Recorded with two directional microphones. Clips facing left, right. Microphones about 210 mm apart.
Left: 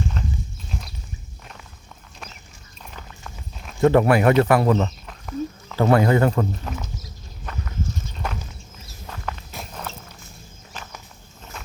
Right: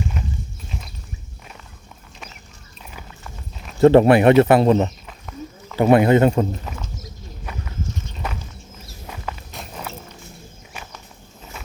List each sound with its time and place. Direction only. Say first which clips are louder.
0.2 s clip-clop: even; 15° right (ahead or behind)
0.7 s clip-clop: left 2 dB; centre (ahead or behind)
2.9 s clip-clop: right 1 dB; 5° right (ahead or behind)
3.8 s speech: right 5 dB; 30° right (ahead or behind)
5.0 s a sound: left 6 dB; centre (ahead or behind)
5.7 s speech: right 4 dB; 15° right (ahead or behind)
7.5 s walk: left 1 dB; 10° right (ahead or behind)